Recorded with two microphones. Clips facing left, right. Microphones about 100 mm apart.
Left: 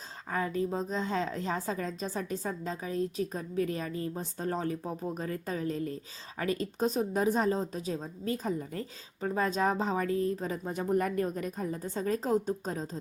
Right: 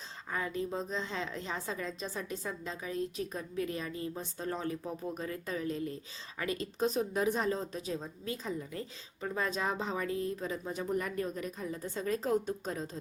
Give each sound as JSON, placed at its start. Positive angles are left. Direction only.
{"t": 0.3, "sound": "a woman's voice", "side_deg": 35}